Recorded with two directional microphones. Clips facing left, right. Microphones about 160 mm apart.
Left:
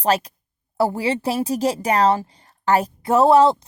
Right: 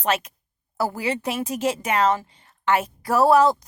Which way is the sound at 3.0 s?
25° left (ahead or behind).